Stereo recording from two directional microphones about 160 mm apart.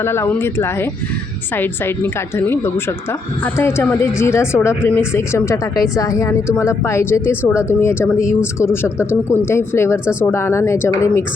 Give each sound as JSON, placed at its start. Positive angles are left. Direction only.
{"t": 0.0, "sound": "speech", "side_deg": 15}